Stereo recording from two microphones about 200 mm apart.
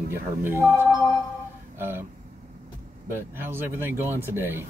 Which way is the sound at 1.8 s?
10° right (ahead or behind).